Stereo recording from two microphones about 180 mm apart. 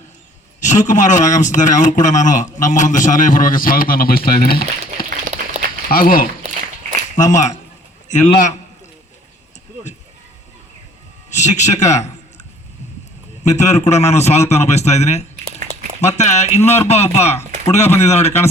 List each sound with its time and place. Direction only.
0.6 s a man's voice: 40° left (ahead or behind)
5.3 s a sound: 40° right (ahead or behind)
5.9 s a man's voice: 55° left (ahead or behind)
6.4 s a sound: 40° right (ahead or behind)
7.2 s a man's voice: 40° left (ahead or behind)
11.3 s speech: 40° left (ahead or behind)
13.5 s speech: 40° left (ahead or behind)